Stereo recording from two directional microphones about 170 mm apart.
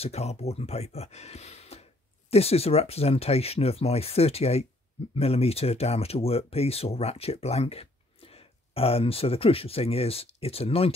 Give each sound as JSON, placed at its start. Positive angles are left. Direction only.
{"t": 0.0, "sound": "speech", "side_deg": 40}